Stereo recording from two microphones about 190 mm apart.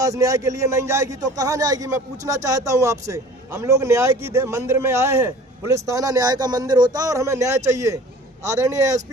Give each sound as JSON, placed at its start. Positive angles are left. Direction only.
{"t": 0.0, "sound": "speech", "side_deg": -15}